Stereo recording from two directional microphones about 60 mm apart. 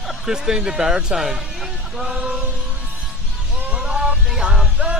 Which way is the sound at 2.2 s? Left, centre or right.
Centre.